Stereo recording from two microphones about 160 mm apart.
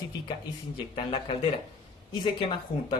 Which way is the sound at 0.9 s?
35° left (ahead or behind).